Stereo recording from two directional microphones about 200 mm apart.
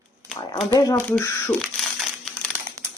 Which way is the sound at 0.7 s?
15° left (ahead or behind).